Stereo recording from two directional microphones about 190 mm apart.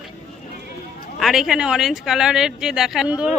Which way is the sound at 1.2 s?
Centre (ahead or behind).